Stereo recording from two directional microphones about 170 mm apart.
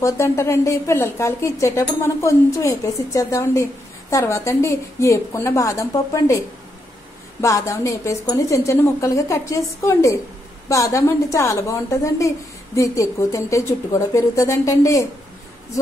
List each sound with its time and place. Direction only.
0.0 s speech: 15° left (ahead or behind)
7.4 s a woman's voice: 20° left (ahead or behind)